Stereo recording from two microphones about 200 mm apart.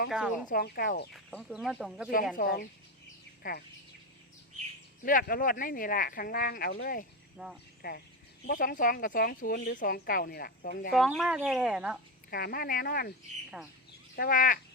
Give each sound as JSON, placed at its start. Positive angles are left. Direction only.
{"t": 0.1, "sound": "speech", "side_deg": -5}
{"t": 0.4, "sound": "speech", "side_deg": 50}
{"t": 1.1, "sound": "speech", "side_deg": 5}
{"t": 2.3, "sound": "speech", "side_deg": 45}
{"t": 5.0, "sound": "speech", "side_deg": 45}
{"t": 7.3, "sound": "speech", "side_deg": -5}
{"t": 7.8, "sound": "speech", "side_deg": 50}
{"t": 10.9, "sound": "speech", "side_deg": 0}
{"t": 12.3, "sound": "speech", "side_deg": 50}
{"t": 14.2, "sound": "speech", "side_deg": 45}